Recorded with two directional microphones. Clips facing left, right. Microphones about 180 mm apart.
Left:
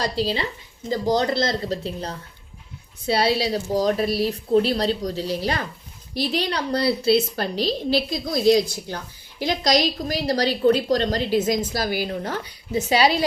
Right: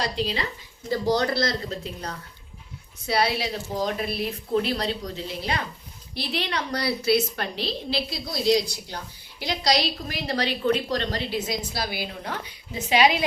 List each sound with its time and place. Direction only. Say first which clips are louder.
0.0 s a woman's voice: left 3 dB; 35° left (ahead or behind)
1.1 s a woman's voice: left 3 dB; 20° left (ahead or behind); by 13.2 s 40° left (ahead or behind)